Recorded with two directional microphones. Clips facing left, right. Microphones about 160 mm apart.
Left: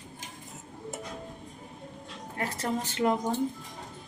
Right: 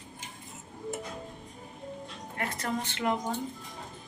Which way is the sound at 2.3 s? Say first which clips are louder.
Left 2 dB; 30° left (ahead or behind).